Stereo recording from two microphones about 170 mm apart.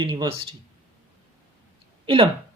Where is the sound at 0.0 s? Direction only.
25° right (ahead or behind).